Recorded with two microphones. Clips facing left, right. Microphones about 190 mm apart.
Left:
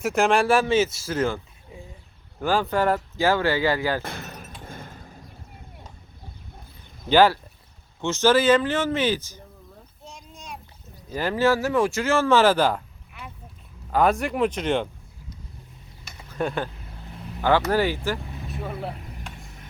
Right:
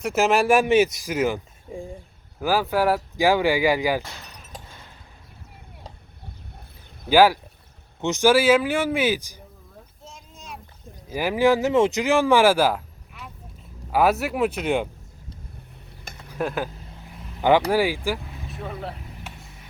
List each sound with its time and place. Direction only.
0.0 s speech: 5° right (ahead or behind)
1.7 s speech: 45° right (ahead or behind)
2.4 s speech: 5° right (ahead or behind)
4.0 s speech: 55° left (ahead or behind)
4.6 s a sound: 50° left (ahead or behind)
7.1 s speech: 10° right (ahead or behind)
10.0 s a sound: centre (ahead or behind)
11.1 s speech: 10° right (ahead or behind)
16.3 s speech: 5° right (ahead or behind)
17.7 s speech: 10° right (ahead or behind)